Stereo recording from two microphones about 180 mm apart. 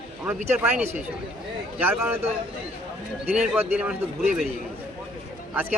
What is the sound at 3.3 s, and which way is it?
Speech, 5° right (ahead or behind).